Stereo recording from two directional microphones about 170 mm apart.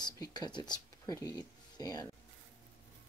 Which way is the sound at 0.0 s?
25° left (ahead or behind).